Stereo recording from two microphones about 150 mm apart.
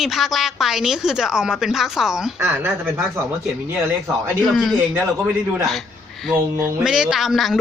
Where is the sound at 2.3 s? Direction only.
15° right (ahead or behind).